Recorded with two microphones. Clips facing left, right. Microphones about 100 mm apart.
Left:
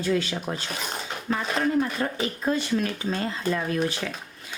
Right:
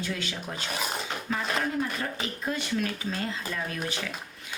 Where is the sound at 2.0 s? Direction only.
40° left (ahead or behind).